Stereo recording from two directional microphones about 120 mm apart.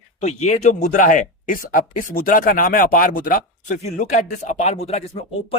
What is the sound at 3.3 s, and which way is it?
Speech, 85° left.